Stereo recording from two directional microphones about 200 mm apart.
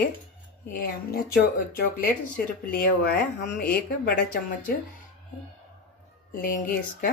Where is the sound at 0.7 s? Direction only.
45° left (ahead or behind).